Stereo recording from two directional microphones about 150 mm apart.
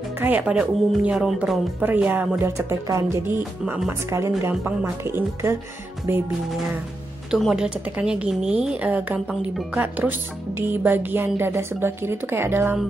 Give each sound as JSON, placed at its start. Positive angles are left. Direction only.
{"t": 0.2, "sound": "a woman's voice", "side_deg": -10}
{"t": 1.8, "sound": "a woman's voice", "side_deg": -10}
{"t": 7.2, "sound": "a woman's voice", "side_deg": 0}